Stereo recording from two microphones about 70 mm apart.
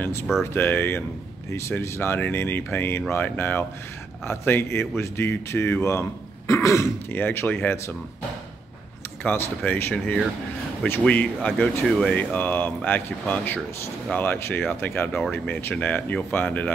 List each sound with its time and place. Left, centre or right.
0.0 s speech: left
7.1 s speech: left
9.2 s speech: left
9.9 s speech: centre
11.8 s speech: centre
12.2 s speech: left